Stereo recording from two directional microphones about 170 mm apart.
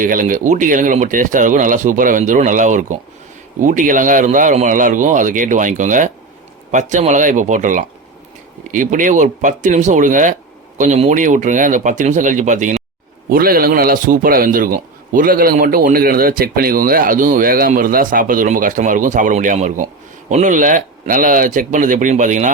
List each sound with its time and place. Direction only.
0.0 s speech: 50° right (ahead or behind)
13.3 s a man's voice: 60° right (ahead or behind)